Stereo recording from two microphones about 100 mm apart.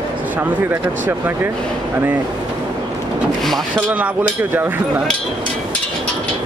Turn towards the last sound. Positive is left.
turn(degrees=-20)  # may be behind; listen again after turning